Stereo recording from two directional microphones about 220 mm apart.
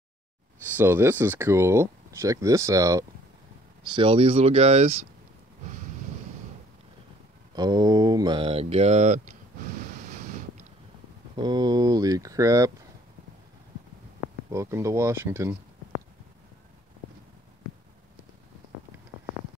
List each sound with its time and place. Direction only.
0.7 s speech: 10° right (ahead or behind)
3.9 s mantra: 25° right (ahead or behind)
7.5 s mantra: 20° right (ahead or behind)
11.3 s speech: 20° right (ahead or behind)
14.5 s speech: 15° right (ahead or behind)